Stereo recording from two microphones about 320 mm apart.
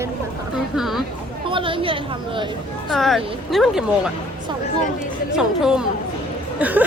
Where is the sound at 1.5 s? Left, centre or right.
Centre.